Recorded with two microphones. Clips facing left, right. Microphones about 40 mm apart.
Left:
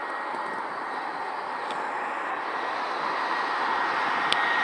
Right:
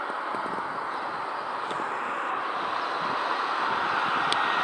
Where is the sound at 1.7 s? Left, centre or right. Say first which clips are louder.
Even; right.